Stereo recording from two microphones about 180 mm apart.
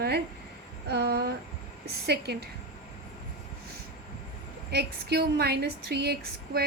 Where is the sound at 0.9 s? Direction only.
65° right (ahead or behind).